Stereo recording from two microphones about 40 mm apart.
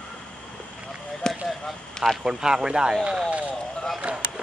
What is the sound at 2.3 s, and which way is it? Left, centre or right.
Speech, centre.